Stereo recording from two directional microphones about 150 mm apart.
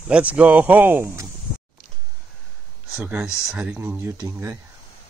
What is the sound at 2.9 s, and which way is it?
Speech, 5° right (ahead or behind).